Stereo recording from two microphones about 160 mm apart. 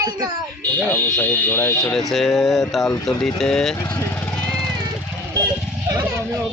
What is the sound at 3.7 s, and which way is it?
Speech, 20° left (ahead or behind).